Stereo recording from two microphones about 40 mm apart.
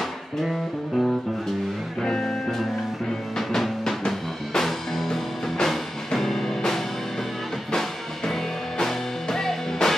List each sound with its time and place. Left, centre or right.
0.4 s music: centre
2.0 s music: centre
3.3 s music: centre
8.3 s music: centre